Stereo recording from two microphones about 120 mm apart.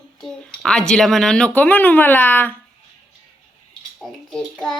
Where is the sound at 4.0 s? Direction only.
Centre (ahead or behind).